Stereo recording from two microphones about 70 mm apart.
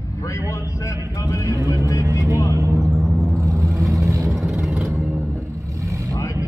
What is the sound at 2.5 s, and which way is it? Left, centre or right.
Vehicle, right.